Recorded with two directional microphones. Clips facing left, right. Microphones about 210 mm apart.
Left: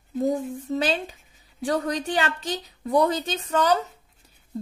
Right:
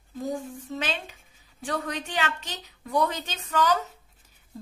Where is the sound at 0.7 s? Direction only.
35° left (ahead or behind).